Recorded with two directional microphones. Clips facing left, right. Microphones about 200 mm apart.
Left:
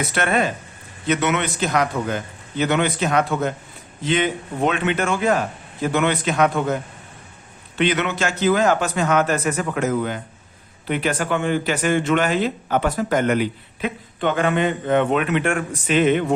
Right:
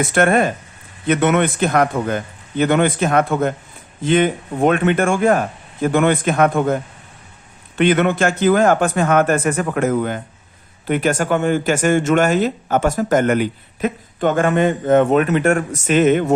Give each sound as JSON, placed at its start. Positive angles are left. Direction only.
{"t": 0.0, "sound": "speech", "side_deg": -50}
{"t": 7.8, "sound": "speech", "side_deg": -50}